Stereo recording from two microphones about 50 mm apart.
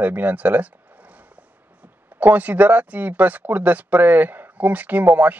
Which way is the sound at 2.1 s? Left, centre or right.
Right.